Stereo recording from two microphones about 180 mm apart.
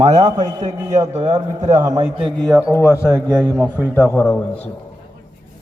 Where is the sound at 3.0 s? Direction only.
5° left (ahead or behind).